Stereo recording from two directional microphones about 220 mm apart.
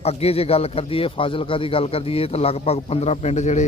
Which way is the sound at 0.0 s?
25° left (ahead or behind).